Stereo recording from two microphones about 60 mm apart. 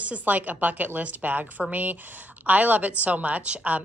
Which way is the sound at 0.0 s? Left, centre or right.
Right.